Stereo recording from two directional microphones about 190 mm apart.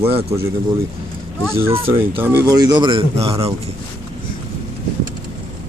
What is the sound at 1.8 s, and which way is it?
Speech, 30° right (ahead or behind).